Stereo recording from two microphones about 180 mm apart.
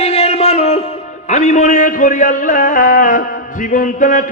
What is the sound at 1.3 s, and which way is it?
A man's voice, 40° left (ahead or behind).